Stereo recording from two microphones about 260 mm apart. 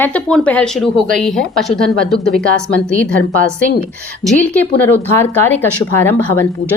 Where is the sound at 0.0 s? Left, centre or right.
Centre.